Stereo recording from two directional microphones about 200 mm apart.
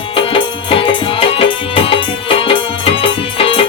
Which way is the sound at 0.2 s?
25° left (ahead or behind).